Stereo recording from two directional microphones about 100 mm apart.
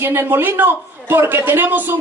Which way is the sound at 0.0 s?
25° right (ahead or behind).